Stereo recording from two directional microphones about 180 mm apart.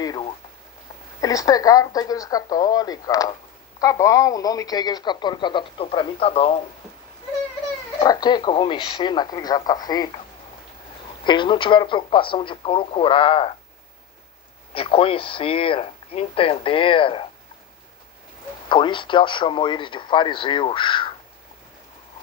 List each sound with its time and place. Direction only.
0.0 s a sound: 20° left (ahead or behind)
1.2 s speech: 20° left (ahead or behind)
8.0 s speech: 20° left (ahead or behind)
11.3 s speech: 25° left (ahead or behind)
14.7 s speech: 30° left (ahead or behind)
18.7 s speech: 25° left (ahead or behind)